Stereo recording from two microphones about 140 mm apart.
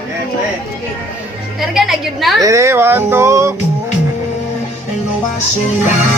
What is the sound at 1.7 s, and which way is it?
Speech, centre (ahead or behind).